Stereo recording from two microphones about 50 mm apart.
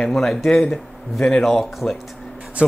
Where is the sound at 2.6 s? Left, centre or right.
Right.